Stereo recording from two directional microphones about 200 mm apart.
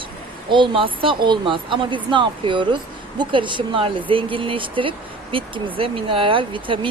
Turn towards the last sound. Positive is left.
turn(degrees=-25)  # may be behind; listen again after turning